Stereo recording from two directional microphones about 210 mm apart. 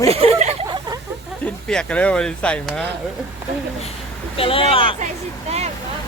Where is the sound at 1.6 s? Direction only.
5° left (ahead or behind).